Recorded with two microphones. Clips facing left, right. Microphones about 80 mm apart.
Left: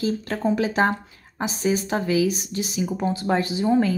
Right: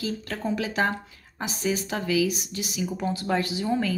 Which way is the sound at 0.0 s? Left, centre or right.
Left.